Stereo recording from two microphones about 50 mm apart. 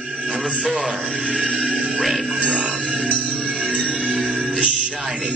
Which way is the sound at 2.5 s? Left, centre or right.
Right.